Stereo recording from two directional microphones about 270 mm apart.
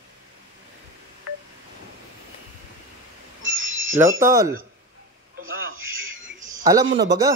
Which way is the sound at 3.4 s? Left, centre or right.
Right.